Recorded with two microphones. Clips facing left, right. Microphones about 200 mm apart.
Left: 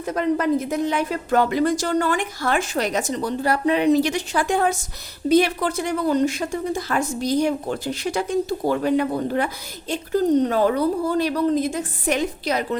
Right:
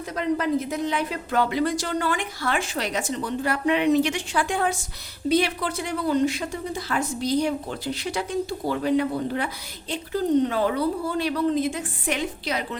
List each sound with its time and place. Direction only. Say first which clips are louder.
0.0 s speech: left 4 dB; 50° left (ahead or behind)